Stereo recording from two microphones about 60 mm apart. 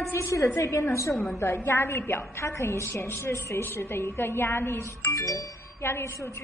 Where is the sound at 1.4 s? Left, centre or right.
Left.